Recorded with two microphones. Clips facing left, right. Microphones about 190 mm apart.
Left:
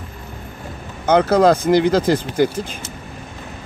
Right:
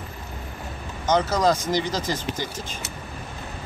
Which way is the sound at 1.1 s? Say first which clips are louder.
Left 7 dB; 60° left (ahead or behind).